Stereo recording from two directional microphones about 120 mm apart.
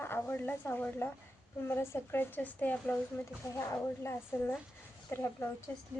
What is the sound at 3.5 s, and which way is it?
Speech, 25° left (ahead or behind).